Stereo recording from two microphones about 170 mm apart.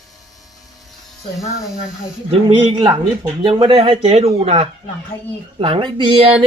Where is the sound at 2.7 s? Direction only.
30° right (ahead or behind).